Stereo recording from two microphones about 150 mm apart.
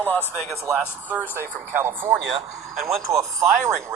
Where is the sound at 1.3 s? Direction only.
15° right (ahead or behind).